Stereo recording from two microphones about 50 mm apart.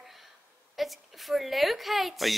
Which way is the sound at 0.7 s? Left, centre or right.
Centre.